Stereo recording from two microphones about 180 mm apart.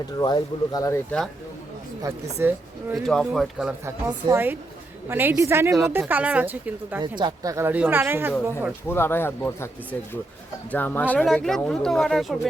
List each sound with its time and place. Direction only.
0.2 s speech: 25° left (ahead or behind)
2.4 s speech: 10° right (ahead or behind)
2.9 s speech: centre (ahead or behind)
3.8 s speech: 15° right (ahead or behind)
7.0 s speech: 25° right (ahead or behind)
8.9 s speech: 10° left (ahead or behind)
10.7 s speech: 10° left (ahead or behind)